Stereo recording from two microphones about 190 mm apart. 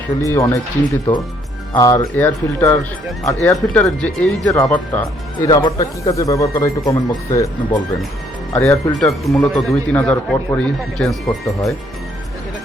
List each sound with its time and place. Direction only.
0.2 s speech: 15° left (ahead or behind)
1.7 s speech: 15° left (ahead or behind)
5.5 s speech: 20° left (ahead or behind); by 11.7 s centre (ahead or behind)